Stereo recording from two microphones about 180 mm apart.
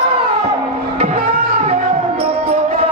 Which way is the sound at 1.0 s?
30° right (ahead or behind).